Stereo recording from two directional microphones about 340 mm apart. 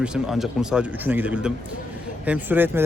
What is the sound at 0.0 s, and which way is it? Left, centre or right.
Speech, centre.